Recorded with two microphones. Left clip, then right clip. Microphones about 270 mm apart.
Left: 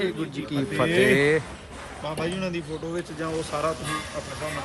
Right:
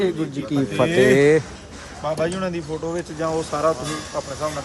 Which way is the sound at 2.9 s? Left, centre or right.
Right.